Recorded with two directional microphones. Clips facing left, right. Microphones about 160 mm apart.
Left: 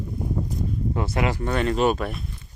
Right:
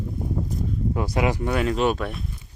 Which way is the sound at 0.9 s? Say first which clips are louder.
Right 2 dB; 15° right (ahead or behind).